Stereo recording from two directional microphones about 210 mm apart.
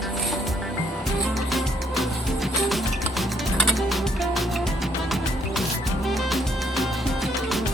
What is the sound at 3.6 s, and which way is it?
Music, centre (ahead or behind).